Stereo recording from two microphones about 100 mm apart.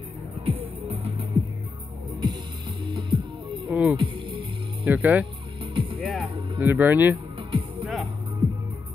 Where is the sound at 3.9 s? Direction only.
55° right (ahead or behind).